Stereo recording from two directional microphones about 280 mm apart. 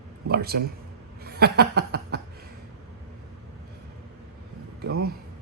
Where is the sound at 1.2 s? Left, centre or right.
Right.